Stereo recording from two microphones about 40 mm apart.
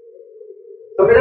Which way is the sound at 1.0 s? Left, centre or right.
Centre.